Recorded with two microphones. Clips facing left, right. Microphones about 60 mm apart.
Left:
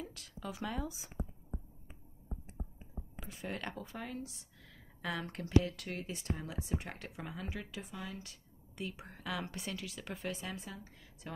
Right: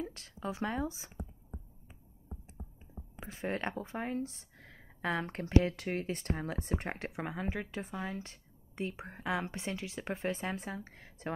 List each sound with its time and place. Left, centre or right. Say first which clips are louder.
0.0 s speech: right 5 dB; right
3.2 s speech: right 6 dB; right
6.9 s speech: right 7 dB; right